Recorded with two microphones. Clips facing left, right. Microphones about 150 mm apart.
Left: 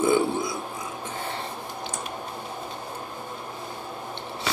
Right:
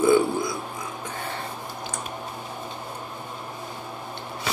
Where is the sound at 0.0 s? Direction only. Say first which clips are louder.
Right 3 dB; 25° left (ahead or behind).